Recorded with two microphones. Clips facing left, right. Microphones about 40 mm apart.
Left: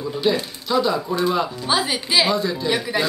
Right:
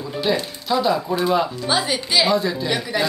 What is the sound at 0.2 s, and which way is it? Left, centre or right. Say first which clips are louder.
Speech: even; centre.